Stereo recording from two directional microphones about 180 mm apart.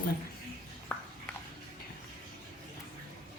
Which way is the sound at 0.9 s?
10° left (ahead or behind).